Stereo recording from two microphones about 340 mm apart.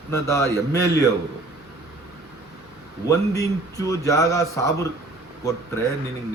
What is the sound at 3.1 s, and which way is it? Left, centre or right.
A man's voice, centre.